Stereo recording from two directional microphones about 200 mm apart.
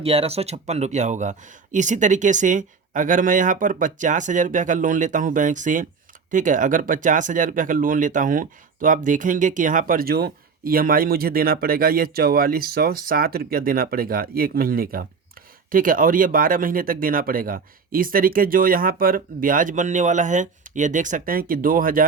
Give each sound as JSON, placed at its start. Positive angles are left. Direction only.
{"t": 0.0, "sound": "speech", "side_deg": -30}